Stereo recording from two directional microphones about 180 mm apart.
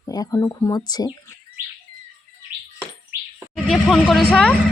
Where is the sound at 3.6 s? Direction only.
Centre (ahead or behind).